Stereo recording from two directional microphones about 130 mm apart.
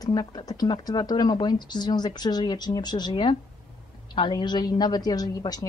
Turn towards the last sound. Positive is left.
turn(degrees=30)  # may be behind; listen again after turning